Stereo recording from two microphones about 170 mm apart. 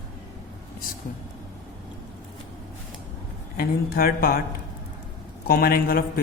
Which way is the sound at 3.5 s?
60° left (ahead or behind).